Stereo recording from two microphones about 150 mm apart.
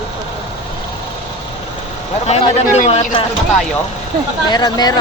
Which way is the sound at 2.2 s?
45° left (ahead or behind).